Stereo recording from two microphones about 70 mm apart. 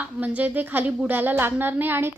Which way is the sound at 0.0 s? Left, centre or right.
Right.